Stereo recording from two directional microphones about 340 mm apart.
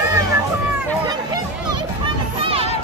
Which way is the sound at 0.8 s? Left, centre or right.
Centre.